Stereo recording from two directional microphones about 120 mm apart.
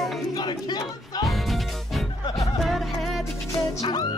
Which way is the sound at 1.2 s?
Centre (ahead or behind).